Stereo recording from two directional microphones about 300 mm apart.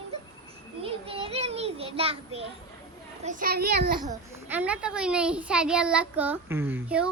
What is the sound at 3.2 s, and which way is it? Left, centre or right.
Speech, right.